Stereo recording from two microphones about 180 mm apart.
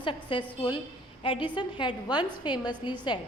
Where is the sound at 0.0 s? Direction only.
25° left (ahead or behind).